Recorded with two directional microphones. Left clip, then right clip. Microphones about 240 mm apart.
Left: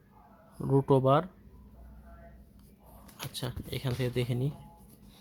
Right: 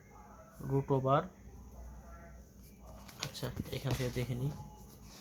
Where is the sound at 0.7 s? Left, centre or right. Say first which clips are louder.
Left 7 dB; left.